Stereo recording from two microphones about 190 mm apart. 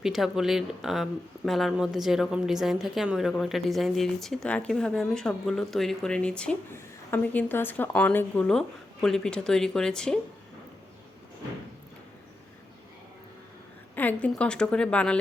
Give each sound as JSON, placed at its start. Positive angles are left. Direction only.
{"t": 0.0, "sound": "a woman's voice", "side_deg": 0}
{"t": 13.9, "sound": "a woman's voice", "side_deg": 10}